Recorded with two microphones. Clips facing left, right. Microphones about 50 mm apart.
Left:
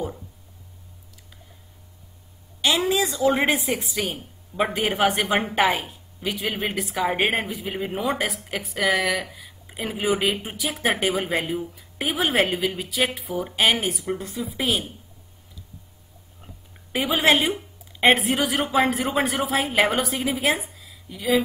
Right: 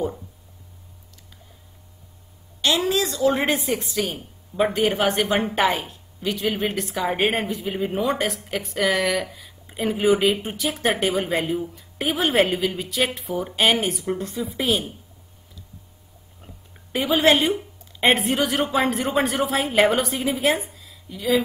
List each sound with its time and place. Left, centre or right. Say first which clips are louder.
2.8 s a woman's voice: even; centre
16.9 s a woman's voice: right 2 dB; centre